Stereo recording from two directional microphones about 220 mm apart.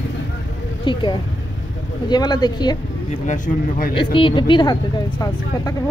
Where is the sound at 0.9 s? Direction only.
25° left (ahead or behind).